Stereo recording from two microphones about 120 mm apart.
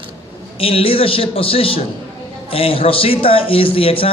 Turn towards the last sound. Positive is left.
turn(degrees=50)  # may be behind; listen again after turning